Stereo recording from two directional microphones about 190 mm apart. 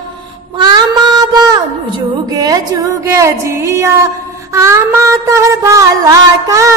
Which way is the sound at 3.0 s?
15° right (ahead or behind).